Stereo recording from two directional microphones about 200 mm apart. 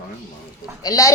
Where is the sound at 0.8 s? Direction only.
15° left (ahead or behind).